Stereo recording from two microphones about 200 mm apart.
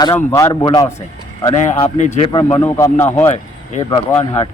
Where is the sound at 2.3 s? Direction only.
25° left (ahead or behind).